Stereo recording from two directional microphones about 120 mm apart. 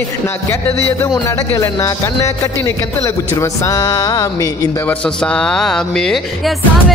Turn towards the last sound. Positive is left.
turn(degrees=5)  # may be behind; listen again after turning